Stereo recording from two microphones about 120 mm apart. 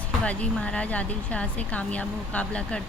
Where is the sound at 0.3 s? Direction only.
10° left (ahead or behind).